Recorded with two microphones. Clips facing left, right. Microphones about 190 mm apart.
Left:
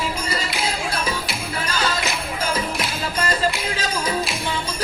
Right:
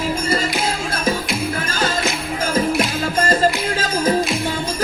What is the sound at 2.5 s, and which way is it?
Music, 45° right (ahead or behind).